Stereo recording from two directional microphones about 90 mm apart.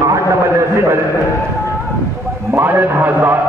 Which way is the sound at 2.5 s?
25° right (ahead or behind).